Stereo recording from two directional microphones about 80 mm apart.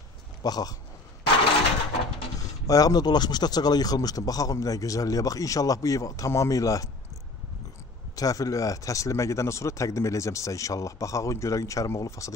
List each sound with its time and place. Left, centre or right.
0.4 s speech: left
2.3 s speech: left
8.2 s speech: left